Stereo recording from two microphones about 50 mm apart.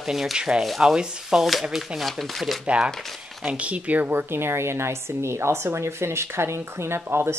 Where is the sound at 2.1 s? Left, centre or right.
Centre.